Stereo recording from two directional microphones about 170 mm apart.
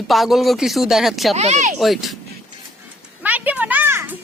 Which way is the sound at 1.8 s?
Centre (ahead or behind).